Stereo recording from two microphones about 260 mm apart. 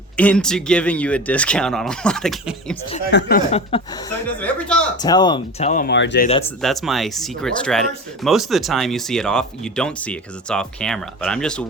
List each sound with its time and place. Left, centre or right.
0.2 s speech: centre
3.1 s speech: left
3.5 s speech: left
4.4 s speech: centre
5.0 s speech: centre; by 6.2 s left
6.6 s speech: centre